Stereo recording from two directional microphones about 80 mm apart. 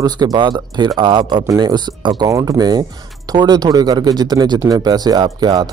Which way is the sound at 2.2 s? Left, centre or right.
Right.